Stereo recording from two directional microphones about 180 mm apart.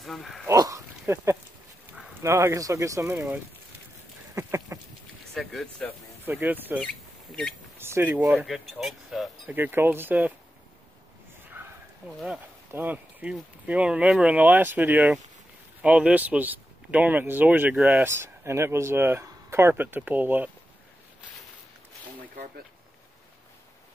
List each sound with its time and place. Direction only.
0.0 s speech: centre (ahead or behind)
0.5 s speech: 20° right (ahead or behind)
4.4 s a sound: 15° right (ahead or behind)
5.3 s speech: centre (ahead or behind)
6.2 s speech: 10° right (ahead or behind)
8.5 s speech: centre (ahead or behind)
11.6 s a sound: 10° right (ahead or behind)
12.7 s speech: 10° right (ahead or behind)